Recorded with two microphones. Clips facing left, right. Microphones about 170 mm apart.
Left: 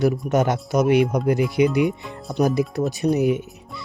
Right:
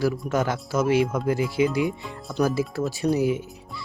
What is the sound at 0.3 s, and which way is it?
Speech, 20° left (ahead or behind).